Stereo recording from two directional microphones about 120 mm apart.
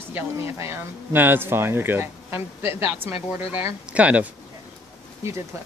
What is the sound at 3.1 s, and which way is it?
Speech, 55° left (ahead or behind).